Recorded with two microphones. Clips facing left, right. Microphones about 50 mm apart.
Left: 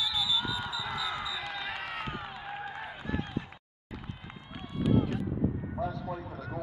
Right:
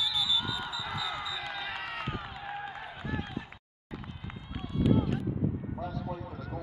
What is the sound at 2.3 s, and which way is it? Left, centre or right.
Run, centre.